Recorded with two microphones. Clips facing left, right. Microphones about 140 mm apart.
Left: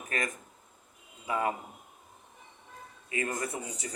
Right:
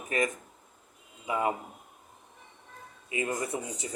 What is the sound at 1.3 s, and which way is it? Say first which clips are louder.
Speech: right 1 dB; 20° right (ahead or behind).